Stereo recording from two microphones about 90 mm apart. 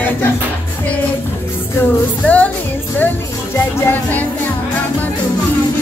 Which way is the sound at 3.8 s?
20° left (ahead or behind).